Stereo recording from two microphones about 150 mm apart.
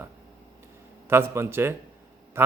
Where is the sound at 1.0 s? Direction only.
15° right (ahead or behind).